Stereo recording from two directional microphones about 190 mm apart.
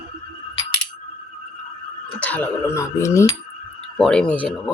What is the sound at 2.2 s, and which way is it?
Speech, 10° left (ahead or behind).